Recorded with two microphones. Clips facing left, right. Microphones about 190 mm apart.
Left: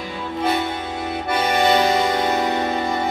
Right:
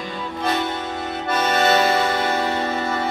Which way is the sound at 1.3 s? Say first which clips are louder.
Left 1 dB; 15° left (ahead or behind).